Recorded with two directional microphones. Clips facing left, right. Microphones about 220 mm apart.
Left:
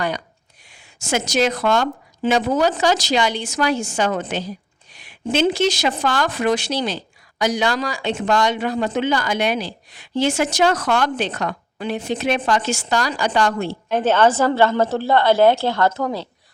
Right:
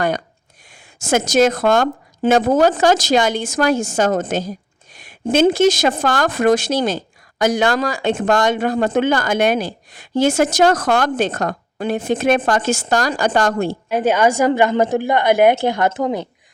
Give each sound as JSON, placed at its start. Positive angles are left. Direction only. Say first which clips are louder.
{"t": 0.7, "sound": "speech", "louder": "right 5 dB", "side_deg": -45}
{"t": 13.9, "sound": "a woman's voice", "louder": "even", "side_deg": -10}